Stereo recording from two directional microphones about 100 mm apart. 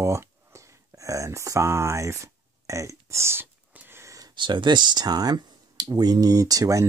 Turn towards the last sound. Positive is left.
turn(degrees=-35)  # may be behind; listen again after turning